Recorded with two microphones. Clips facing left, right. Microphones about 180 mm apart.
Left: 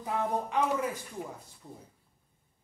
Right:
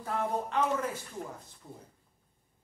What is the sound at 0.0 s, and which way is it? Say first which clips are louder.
Speech: left 1 dB; 15° left (ahead or behind).